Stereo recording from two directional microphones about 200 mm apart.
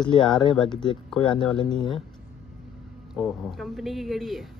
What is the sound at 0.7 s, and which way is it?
Speech, 20° left (ahead or behind).